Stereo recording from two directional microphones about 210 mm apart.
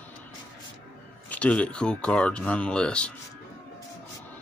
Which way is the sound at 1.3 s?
5° left (ahead or behind).